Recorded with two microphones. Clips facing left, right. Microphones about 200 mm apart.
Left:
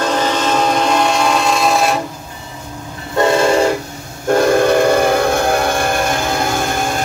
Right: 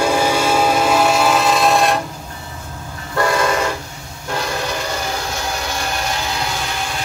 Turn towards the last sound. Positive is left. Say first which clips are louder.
# left 7 dB
turn(degrees=50)  # may be behind; listen again after turning